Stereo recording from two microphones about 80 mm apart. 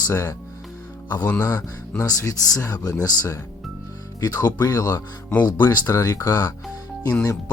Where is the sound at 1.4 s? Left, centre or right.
Left.